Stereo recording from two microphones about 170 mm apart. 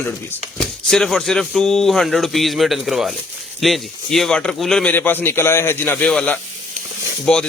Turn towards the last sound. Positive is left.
turn(degrees=5)  # may be behind; listen again after turning